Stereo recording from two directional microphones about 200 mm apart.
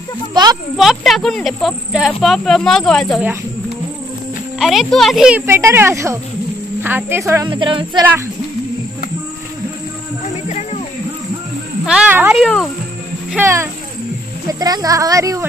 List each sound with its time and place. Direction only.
0.3 s a child's voice: 20° right (ahead or behind)
0.7 s speech: centre (ahead or behind)
4.6 s a child's voice: centre (ahead or behind); by 8.0 s 25° right (ahead or behind)
11.8 s speech: 5° right (ahead or behind)
14.5 s a child's voice: 20° right (ahead or behind)